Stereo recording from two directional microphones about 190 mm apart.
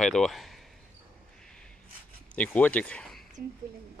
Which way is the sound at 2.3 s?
5° left (ahead or behind).